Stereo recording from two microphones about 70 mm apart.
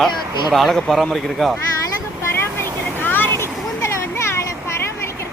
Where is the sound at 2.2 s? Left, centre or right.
Left.